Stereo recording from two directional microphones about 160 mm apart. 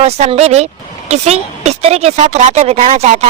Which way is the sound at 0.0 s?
40° right (ahead or behind).